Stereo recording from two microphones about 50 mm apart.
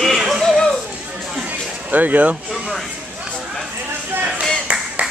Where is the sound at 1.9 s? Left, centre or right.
Right.